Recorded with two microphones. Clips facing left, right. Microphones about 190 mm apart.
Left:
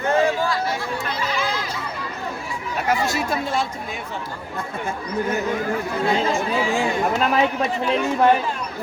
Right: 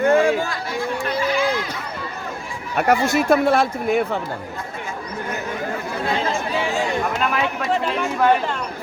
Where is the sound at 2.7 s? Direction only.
60° right (ahead or behind).